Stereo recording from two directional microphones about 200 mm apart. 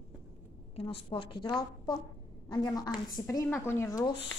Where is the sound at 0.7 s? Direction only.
30° left (ahead or behind).